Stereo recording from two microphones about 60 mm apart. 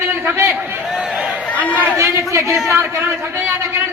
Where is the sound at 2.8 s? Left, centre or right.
Right.